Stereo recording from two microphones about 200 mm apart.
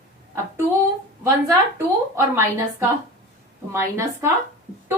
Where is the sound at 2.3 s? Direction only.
15° right (ahead or behind).